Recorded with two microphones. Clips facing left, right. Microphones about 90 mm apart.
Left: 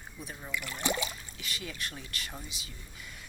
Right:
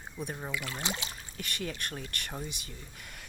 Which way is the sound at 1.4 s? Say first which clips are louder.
Right 3 dB; 50° right (ahead or behind).